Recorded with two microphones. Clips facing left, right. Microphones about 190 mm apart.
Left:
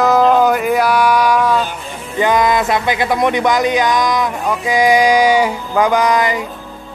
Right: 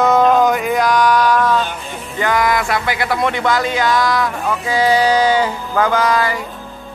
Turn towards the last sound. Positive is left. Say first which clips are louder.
# left 2 dB
turn(degrees=20)  # may be behind; listen again after turning